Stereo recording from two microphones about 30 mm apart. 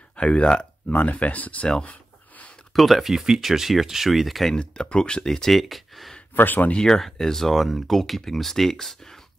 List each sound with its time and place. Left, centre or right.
0.1 s speech: left
0.8 s speech: left
1.9 s a sound: left
2.7 s speech: centre
4.6 s speech: left
5.2 s speech: centre
5.5 s speech: centre
6.3 s speech: left
7.0 s speech: centre